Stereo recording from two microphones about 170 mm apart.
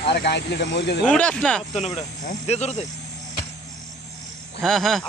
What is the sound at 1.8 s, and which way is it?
Speech, 40° left (ahead or behind).